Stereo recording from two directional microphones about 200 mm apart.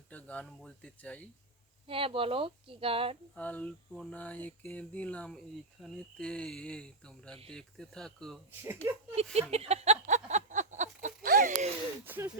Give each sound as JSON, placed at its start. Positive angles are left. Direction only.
{"t": 0.1, "sound": "speech", "side_deg": 5}
{"t": 1.9, "sound": "speech", "side_deg": -25}
{"t": 3.3, "sound": "speech", "side_deg": 5}
{"t": 8.6, "sound": "speech", "side_deg": -15}
{"t": 9.3, "sound": "a sound", "side_deg": -30}
{"t": 12.0, "sound": "speech", "side_deg": -10}